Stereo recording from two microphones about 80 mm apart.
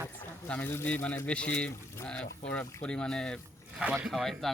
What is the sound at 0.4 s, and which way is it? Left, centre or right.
Speech, centre.